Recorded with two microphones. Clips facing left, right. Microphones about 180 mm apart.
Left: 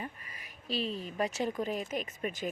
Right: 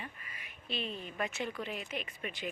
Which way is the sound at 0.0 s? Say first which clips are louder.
Left 5 dB; 40° left (ahead or behind).